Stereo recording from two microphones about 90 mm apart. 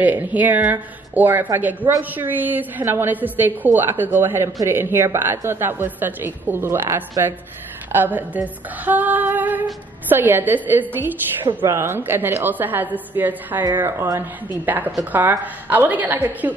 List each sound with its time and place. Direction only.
0.0 s a woman's voice: 20° right (ahead or behind)